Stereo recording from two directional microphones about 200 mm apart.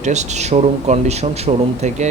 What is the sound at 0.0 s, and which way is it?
Speech, 35° right (ahead or behind).